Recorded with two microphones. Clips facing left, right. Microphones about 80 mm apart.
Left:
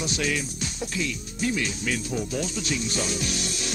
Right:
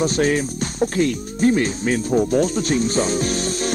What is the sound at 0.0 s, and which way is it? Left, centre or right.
Speech, right.